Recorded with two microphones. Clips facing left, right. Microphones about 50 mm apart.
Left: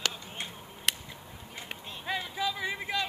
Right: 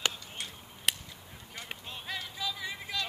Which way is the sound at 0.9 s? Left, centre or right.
Centre.